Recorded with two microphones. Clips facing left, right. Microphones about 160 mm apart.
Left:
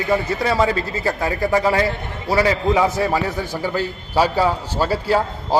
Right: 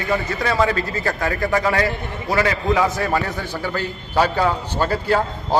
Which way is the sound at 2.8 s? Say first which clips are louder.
Left 2 dB; 15° left (ahead or behind).